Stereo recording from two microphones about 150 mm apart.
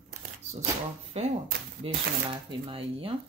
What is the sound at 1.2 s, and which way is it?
Speech, 45° right (ahead or behind).